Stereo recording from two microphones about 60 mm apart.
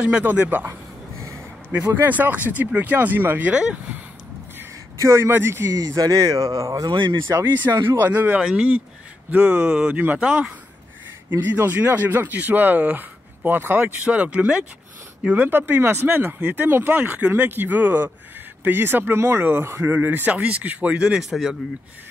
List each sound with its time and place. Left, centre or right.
0.0 s speech: right
1.9 s speech: right
4.9 s a man's voice: right
5.3 s speech: right
5.8 s speech: right
8.0 s speech: right
8.4 s speech: centre
9.3 s speech: right
15.4 s speech: right
20.3 s speech: right
21.2 s speech: centre